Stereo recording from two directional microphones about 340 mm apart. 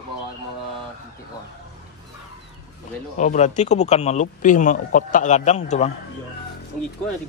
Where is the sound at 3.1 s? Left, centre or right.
Left.